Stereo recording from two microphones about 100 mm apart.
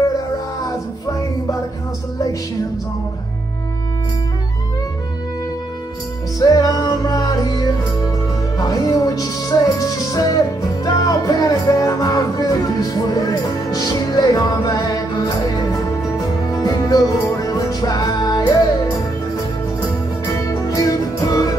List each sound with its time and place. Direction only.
6.4 s music: 40° left (ahead or behind)
16.6 s music: 40° left (ahead or behind)
20.7 s music: 35° left (ahead or behind)